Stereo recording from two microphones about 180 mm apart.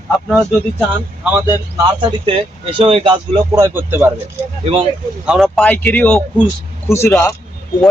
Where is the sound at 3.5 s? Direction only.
15° right (ahead or behind).